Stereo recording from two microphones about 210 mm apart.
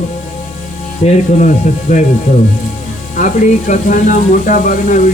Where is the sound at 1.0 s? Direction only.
35° left (ahead or behind).